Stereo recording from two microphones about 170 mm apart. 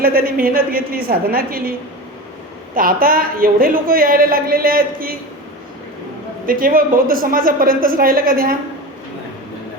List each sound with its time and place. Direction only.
0.0 s a woman's voice: 60° right (ahead or behind)
2.7 s a woman's voice: 55° right (ahead or behind)
6.4 s a woman's voice: 55° right (ahead or behind)